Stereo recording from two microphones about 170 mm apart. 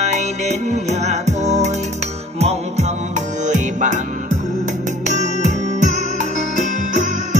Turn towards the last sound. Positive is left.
turn(degrees=-45)  # may be behind; listen again after turning